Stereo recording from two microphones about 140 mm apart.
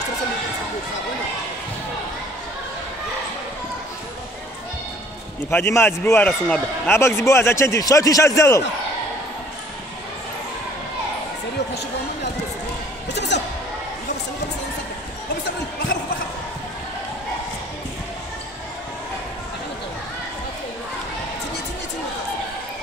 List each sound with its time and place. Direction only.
5.5 s a man's voice: 20° left (ahead or behind)